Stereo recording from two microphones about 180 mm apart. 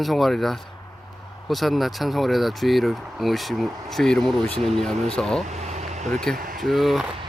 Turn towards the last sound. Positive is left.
turn(degrees=0)  # may be behind; listen again after turning